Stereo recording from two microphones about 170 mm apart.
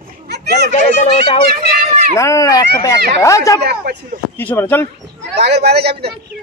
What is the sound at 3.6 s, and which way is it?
Speech, 70° right (ahead or behind).